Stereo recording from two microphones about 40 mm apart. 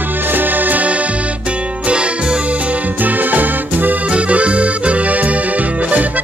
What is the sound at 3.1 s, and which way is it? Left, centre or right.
Music, right.